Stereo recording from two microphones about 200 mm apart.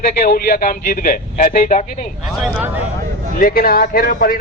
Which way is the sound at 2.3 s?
5° right (ahead or behind).